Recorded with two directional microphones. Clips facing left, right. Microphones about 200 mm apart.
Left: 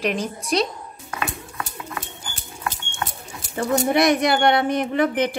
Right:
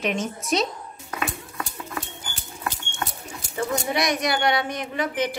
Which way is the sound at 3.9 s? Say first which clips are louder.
Left 8 dB; 55° left (ahead or behind).